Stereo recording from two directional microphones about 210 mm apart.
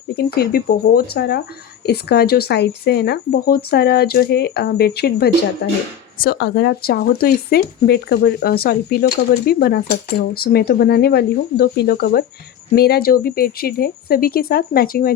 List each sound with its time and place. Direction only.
0.3 s speech: 45° left (ahead or behind)